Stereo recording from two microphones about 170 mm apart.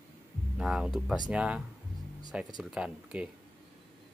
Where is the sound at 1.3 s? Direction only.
5° right (ahead or behind).